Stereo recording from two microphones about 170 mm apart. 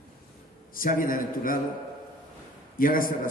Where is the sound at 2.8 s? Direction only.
55° left (ahead or behind).